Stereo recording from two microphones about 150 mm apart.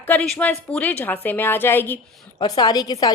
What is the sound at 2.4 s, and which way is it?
Speech, 30° left (ahead or behind).